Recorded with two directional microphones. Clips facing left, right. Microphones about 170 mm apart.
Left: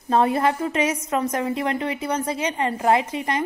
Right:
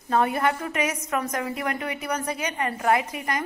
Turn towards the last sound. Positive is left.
turn(degrees=25)  # may be behind; listen again after turning